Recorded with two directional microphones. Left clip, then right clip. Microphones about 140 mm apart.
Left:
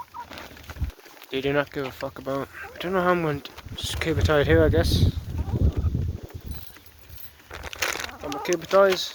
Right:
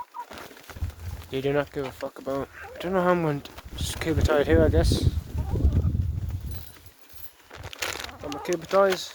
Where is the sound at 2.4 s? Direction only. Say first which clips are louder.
Left 1 dB; 35° right (ahead or behind).